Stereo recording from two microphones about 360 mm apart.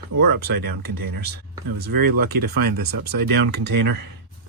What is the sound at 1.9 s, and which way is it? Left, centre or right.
Speech, right.